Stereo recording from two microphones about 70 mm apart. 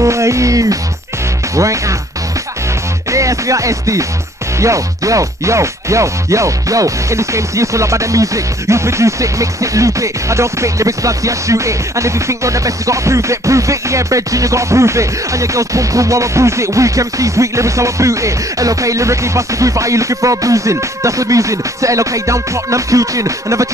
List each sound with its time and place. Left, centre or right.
0.0 s music: right
3.1 s music: right